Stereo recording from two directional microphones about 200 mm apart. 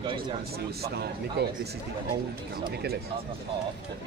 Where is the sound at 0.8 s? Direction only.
55° right (ahead or behind).